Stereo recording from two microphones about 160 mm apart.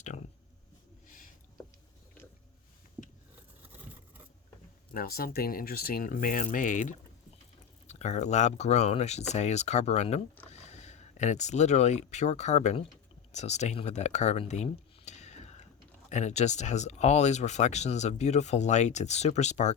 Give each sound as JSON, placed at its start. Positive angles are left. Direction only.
{"t": 4.9, "sound": "speech", "side_deg": 70}